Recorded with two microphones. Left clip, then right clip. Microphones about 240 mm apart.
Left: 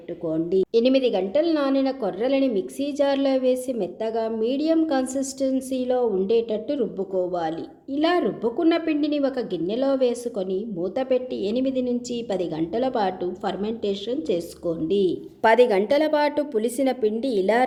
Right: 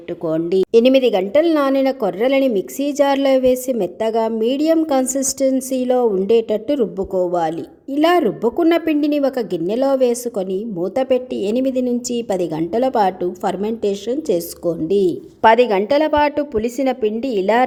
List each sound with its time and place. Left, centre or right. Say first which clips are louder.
0.3 s a woman's voice: right 5 dB; centre
0.7 s a woman's voice: right 9 dB; right